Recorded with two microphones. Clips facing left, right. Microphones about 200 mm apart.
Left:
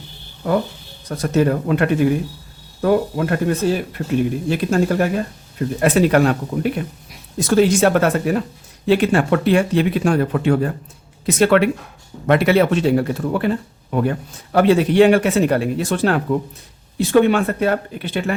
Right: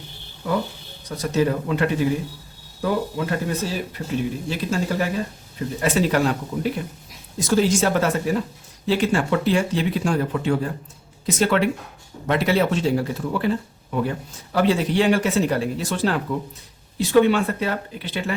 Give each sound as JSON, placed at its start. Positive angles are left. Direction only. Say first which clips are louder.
{"t": 1.0, "sound": "speech", "louder": "left 4 dB", "side_deg": 55}